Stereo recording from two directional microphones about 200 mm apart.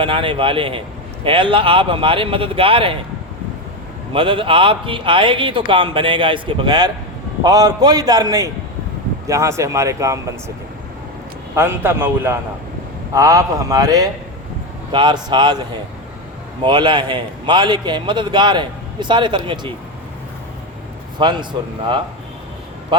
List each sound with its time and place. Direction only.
0.0 s a man's voice: 25° right (ahead or behind)
4.1 s a man's voice: 25° right (ahead or behind)
11.5 s a man's voice: 10° right (ahead or behind)
16.6 s a man's voice: 20° right (ahead or behind)
21.2 s a man's voice: 25° right (ahead or behind)